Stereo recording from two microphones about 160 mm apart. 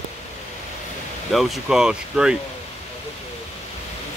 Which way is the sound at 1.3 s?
Centre (ahead or behind).